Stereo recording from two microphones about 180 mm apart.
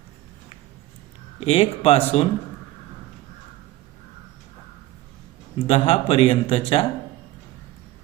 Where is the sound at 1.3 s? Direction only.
35° left (ahead or behind).